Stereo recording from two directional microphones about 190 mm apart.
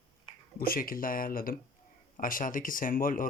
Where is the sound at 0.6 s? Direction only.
50° left (ahead or behind).